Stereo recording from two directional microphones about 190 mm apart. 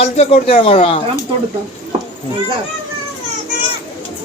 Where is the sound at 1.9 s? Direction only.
35° right (ahead or behind).